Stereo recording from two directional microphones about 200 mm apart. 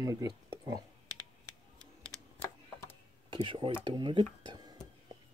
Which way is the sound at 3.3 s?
25° right (ahead or behind).